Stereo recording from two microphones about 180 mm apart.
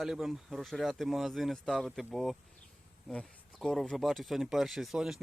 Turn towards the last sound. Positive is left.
turn(degrees=0)  # may be behind; listen again after turning